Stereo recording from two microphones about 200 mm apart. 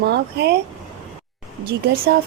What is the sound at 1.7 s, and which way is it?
Speech, 55° right (ahead or behind).